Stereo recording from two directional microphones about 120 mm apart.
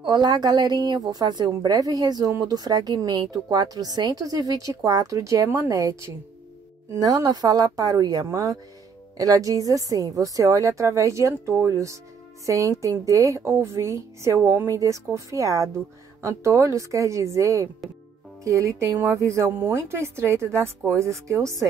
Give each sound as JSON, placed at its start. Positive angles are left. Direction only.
{"t": 0.0, "sound": "a woman's voice", "side_deg": -35}